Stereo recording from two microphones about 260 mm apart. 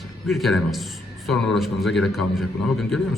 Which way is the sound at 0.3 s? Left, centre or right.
Centre.